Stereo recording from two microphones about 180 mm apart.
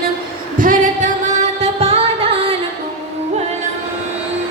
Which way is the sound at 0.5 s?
45° right (ahead or behind).